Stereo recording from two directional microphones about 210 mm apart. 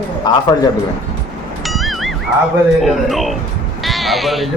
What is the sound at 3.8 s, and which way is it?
Sheep, centre (ahead or behind).